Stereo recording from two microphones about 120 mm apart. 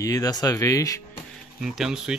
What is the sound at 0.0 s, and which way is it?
Speech, 30° left (ahead or behind).